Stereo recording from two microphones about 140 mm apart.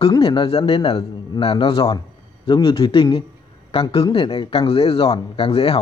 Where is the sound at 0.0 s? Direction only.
35° left (ahead or behind).